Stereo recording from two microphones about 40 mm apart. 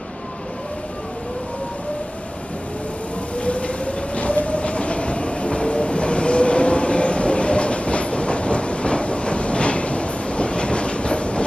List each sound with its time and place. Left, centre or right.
3.3 s train: left